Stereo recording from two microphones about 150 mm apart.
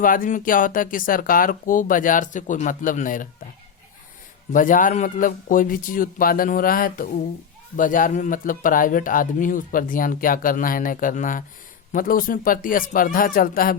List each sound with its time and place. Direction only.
0.0 s speech: 65° left (ahead or behind)
4.5 s speech: 60° left (ahead or behind)